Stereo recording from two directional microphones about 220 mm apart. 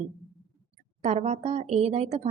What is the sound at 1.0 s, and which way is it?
Speech, 30° right (ahead or behind).